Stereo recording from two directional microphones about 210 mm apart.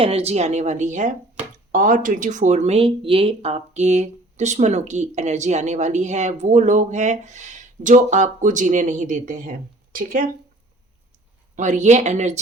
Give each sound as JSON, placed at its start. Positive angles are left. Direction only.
{"t": 0.0, "sound": "speech", "side_deg": -30}
{"t": 11.5, "sound": "speech", "side_deg": -35}